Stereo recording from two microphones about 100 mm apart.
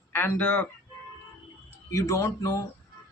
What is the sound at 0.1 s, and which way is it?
Speech, 25° left (ahead or behind).